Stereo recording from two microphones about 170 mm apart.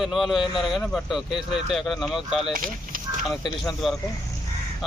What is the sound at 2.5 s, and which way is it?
Speech, 55° right (ahead or behind).